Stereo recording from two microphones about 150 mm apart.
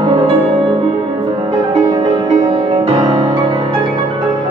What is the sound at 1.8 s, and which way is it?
Music, 35° right (ahead or behind).